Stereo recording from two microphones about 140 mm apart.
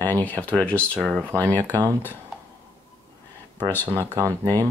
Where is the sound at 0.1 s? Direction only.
10° left (ahead or behind).